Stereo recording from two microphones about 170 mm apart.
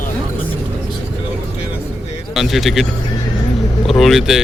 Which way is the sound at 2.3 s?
Centre (ahead or behind).